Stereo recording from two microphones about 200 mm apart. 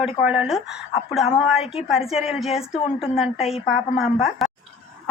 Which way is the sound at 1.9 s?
Centre (ahead or behind).